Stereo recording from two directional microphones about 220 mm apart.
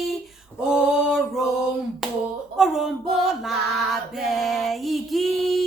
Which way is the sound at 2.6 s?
Centre (ahead or behind).